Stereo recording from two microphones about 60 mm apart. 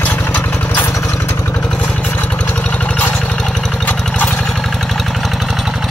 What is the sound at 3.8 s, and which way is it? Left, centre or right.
Lawn mower, left.